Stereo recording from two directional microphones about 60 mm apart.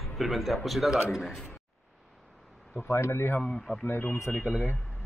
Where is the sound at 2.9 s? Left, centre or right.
Left.